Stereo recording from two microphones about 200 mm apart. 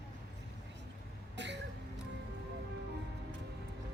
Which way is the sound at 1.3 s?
60° right (ahead or behind).